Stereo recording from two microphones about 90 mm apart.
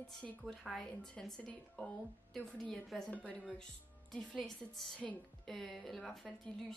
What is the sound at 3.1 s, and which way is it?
A woman's voice, 15° left (ahead or behind).